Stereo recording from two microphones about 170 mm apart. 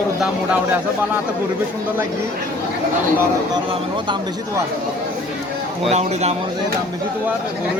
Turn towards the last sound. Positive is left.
turn(degrees=-40)  # may be behind; listen again after turning